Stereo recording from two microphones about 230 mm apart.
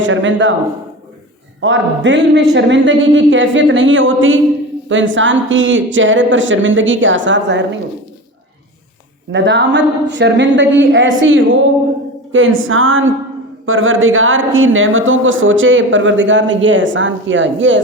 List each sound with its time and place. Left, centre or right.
0.0 s speech: right
1.6 s speech: right
9.3 s speech: right